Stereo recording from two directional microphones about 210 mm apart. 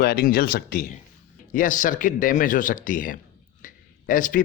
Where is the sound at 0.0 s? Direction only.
45° left (ahead or behind).